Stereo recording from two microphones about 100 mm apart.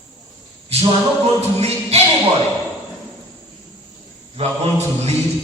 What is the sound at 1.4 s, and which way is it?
Chant, 90° right.